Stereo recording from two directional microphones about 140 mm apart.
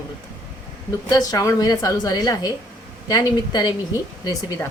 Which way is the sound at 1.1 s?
25° left (ahead or behind).